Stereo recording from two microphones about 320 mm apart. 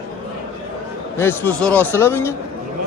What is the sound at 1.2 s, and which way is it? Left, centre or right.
A man's voice, centre.